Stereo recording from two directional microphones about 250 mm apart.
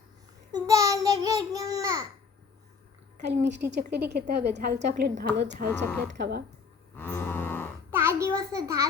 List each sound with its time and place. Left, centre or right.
0.5 s babbling: centre
3.2 s a woman's voice: right
6.9 s cattle: centre
7.9 s a sound: centre